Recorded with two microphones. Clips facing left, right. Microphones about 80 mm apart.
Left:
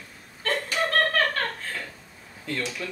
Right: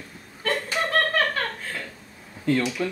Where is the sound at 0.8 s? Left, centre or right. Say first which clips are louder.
Even; centre.